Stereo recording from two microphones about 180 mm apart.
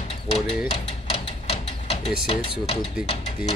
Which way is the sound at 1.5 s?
35° left (ahead or behind).